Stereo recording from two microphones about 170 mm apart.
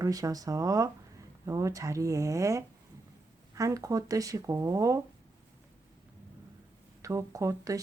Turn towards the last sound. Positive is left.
turn(degrees=-20)  # may be behind; listen again after turning